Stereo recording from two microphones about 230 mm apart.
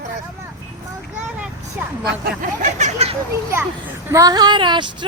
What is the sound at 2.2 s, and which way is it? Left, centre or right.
Speech, right.